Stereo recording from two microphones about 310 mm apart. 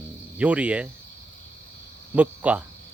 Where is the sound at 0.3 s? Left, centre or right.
Centre.